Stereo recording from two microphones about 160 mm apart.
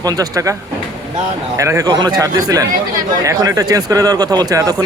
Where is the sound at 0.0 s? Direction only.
25° right (ahead or behind).